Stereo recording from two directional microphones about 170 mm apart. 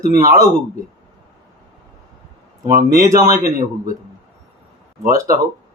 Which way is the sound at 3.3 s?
55° right (ahead or behind).